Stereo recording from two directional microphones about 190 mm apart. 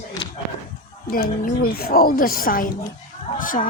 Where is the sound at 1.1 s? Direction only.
50° left (ahead or behind).